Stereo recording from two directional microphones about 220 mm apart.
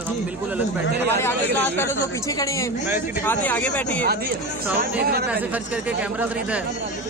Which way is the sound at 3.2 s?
10° left (ahead or behind).